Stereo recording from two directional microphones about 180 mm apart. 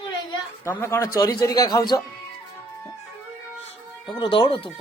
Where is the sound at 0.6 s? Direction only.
15° left (ahead or behind).